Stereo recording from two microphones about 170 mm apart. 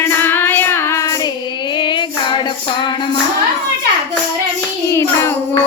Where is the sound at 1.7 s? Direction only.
25° left (ahead or behind).